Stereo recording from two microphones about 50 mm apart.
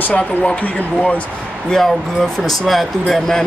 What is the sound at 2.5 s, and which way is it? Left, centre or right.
Speech, centre.